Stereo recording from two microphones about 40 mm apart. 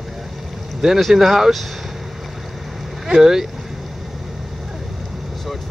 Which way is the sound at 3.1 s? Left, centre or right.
Centre.